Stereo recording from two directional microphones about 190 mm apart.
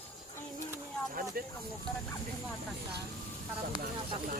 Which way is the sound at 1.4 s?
50° right (ahead or behind).